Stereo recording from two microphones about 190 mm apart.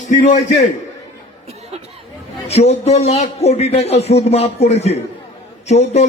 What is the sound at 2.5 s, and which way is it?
A man's voice, 35° left (ahead or behind).